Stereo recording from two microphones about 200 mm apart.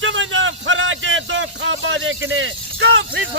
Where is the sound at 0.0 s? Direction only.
75° right (ahead or behind).